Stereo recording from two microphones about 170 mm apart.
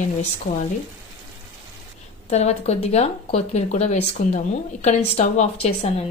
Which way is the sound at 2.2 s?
40° left (ahead or behind).